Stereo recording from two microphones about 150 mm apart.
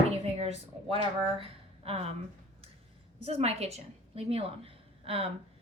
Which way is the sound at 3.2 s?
40° right (ahead or behind).